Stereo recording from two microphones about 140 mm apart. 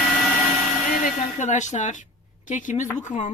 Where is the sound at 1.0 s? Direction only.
60° left (ahead or behind).